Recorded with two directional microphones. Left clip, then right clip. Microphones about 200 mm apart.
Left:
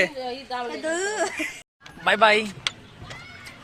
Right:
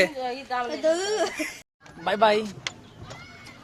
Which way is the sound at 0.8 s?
65° right (ahead or behind).